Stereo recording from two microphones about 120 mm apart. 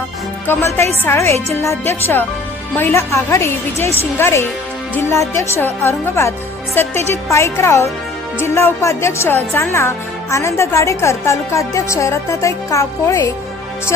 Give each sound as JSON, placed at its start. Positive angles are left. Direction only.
{"t": 0.4, "sound": "speech", "side_deg": 20}